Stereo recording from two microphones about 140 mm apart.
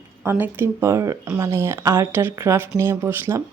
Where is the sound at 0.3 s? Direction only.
15° right (ahead or behind).